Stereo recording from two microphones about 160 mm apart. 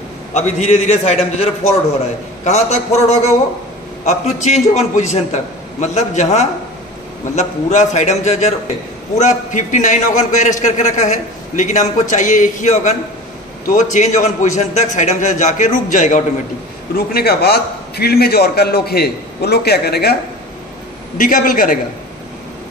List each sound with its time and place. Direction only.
0.3 s a man's voice: 45° left (ahead or behind)
16.9 s a man's voice: 75° left (ahead or behind)
21.2 s a man's voice: 55° left (ahead or behind)